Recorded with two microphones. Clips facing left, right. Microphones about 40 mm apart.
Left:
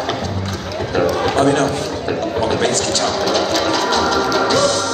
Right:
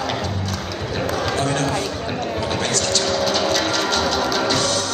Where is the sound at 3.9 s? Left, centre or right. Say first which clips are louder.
Left 4 dB; left.